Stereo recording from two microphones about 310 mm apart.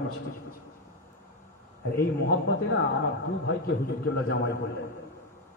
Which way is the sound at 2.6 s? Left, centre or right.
Left.